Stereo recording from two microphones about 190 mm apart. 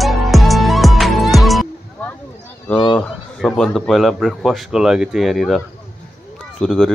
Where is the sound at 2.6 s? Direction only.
5° left (ahead or behind).